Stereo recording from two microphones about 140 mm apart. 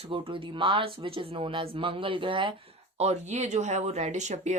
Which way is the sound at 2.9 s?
50° right (ahead or behind).